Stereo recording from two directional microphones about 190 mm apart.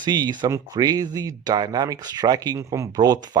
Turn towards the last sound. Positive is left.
turn(degrees=-20)  # may be behind; listen again after turning